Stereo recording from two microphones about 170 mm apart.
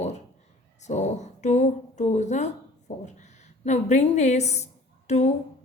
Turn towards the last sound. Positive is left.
turn(degrees=40)  # may be behind; listen again after turning